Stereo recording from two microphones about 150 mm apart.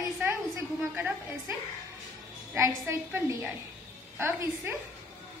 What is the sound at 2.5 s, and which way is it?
A woman's voice, 15° right (ahead or behind).